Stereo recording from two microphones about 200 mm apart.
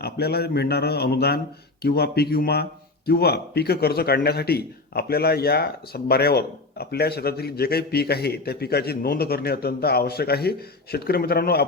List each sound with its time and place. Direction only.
0.0 s a man's voice: 50° left (ahead or behind)